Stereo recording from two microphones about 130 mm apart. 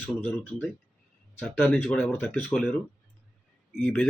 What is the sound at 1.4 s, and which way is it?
Speech, 5° left (ahead or behind).